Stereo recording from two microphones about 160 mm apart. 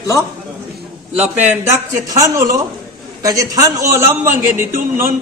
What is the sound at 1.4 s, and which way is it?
A man's voice, 15° right (ahead or behind).